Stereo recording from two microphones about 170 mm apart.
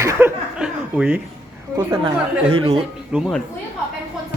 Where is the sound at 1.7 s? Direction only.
30° right (ahead or behind).